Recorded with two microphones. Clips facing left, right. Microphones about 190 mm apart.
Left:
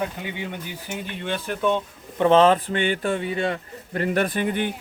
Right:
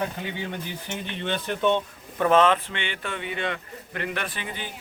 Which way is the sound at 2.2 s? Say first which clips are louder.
Left 4 dB; 30° left (ahead or behind).